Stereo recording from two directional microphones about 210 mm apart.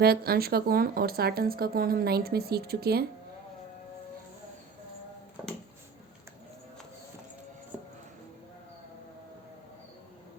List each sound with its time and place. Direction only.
0.0 s speech: 45° right (ahead or behind)
7.7 s music: 5° right (ahead or behind)